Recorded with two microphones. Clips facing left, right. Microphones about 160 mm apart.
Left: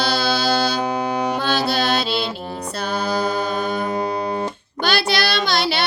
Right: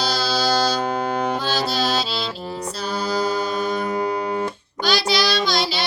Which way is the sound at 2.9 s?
60° left (ahead or behind).